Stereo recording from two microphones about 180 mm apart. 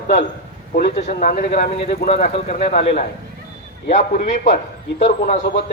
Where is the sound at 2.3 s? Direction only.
35° left (ahead or behind).